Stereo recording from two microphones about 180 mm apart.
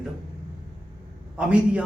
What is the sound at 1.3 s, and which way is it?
Speech, 5° right (ahead or behind).